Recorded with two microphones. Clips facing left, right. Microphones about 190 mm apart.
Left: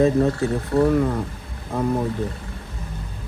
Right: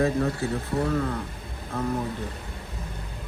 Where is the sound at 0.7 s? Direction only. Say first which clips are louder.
Left 9 dB; 70° left (ahead or behind).